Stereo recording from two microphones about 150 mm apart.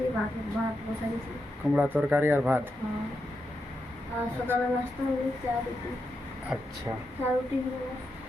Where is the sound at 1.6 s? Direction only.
5° right (ahead or behind).